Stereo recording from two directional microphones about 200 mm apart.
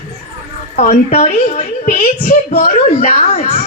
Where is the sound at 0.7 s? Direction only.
40° left (ahead or behind).